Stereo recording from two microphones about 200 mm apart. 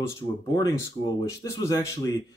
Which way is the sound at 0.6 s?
20° left (ahead or behind).